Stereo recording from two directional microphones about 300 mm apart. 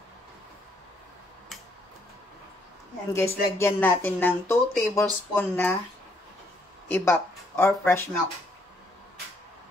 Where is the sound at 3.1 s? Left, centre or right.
Centre.